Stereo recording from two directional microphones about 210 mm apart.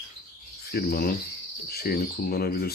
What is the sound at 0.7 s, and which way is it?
Cricket, 50° left (ahead or behind).